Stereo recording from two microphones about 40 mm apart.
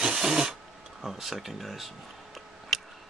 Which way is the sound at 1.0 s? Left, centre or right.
Centre.